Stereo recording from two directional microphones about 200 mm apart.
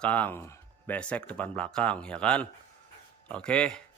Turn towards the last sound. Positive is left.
turn(degrees=5)  # may be behind; listen again after turning